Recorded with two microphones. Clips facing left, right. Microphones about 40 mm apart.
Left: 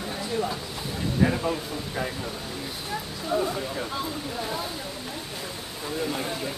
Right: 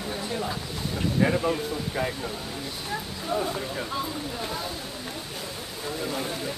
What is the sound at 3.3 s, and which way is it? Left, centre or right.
Speech, centre.